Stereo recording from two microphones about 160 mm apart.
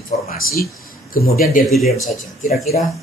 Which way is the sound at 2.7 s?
50° left (ahead or behind).